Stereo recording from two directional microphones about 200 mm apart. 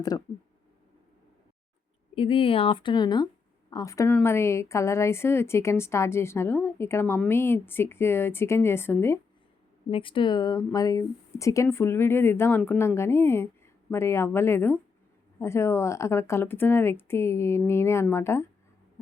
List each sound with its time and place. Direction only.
0.1 s speech: 15° left (ahead or behind)
2.1 s speech: 25° left (ahead or behind); by 9.1 s 10° left (ahead or behind)
9.9 s speech: 25° left (ahead or behind)